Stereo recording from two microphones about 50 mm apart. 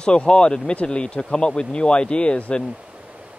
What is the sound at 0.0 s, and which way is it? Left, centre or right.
Speech, centre.